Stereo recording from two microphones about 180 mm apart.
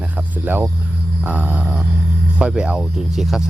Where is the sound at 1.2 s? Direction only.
5° right (ahead or behind).